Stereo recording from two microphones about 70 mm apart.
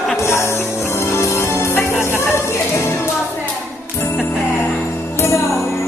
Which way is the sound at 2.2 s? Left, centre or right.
Left.